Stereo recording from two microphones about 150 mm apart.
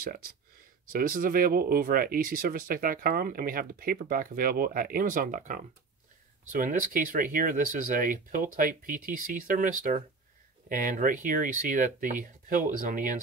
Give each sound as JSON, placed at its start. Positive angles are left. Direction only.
{"t": 0.0, "sound": "speech", "side_deg": -75}